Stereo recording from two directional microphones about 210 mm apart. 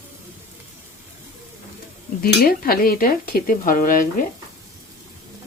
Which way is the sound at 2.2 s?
45° left (ahead or behind).